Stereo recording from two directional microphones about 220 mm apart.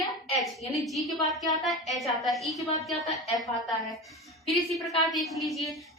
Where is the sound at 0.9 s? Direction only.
Centre (ahead or behind).